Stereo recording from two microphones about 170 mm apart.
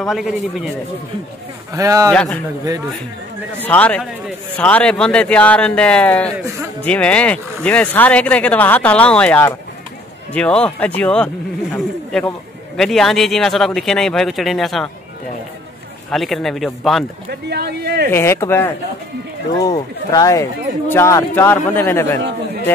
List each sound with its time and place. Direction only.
0.0 s a man's voice: centre (ahead or behind)
1.7 s a man's voice: 20° right (ahead or behind)
2.1 s speech: 5° left (ahead or behind)
3.6 s a man's voice: 10° left (ahead or behind)
16.1 s a man's voice: centre (ahead or behind)
17.3 s speech: 75° right (ahead or behind)
18.1 s speech: 15° left (ahead or behind)